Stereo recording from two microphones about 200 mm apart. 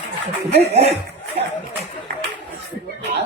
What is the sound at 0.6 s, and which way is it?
Speech, 30° right (ahead or behind).